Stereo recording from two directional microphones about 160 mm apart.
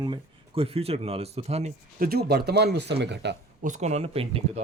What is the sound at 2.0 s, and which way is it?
Speech, 75° right (ahead or behind).